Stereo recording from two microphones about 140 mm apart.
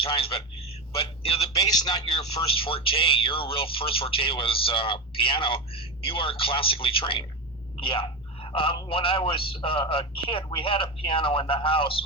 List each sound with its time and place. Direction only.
0.0 s a man's voice: 40° left (ahead or behind)
1.5 s a man's voice: 30° left (ahead or behind)
2.6 s speech: 40° left (ahead or behind)